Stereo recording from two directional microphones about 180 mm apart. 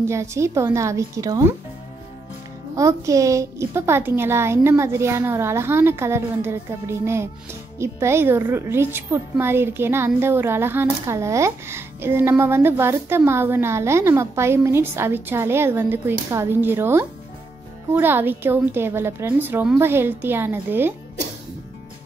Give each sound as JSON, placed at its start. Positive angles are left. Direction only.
{"t": 0.0, "sound": "a woman's voice", "side_deg": -15}
{"t": 2.7, "sound": "a woman's voice", "side_deg": -15}